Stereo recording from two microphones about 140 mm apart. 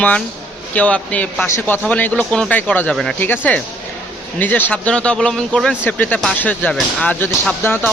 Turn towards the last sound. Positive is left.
turn(degrees=20)  # may be behind; listen again after turning